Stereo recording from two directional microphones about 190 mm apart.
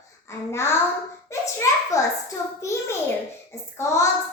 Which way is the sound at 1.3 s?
15° left (ahead or behind).